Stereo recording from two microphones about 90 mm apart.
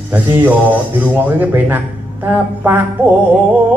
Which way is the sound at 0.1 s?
20° right (ahead or behind).